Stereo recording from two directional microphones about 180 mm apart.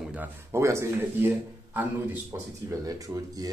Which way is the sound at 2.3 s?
15° right (ahead or behind).